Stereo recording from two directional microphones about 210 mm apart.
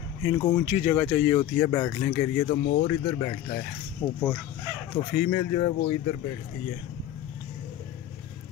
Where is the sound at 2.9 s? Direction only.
20° left (ahead or behind).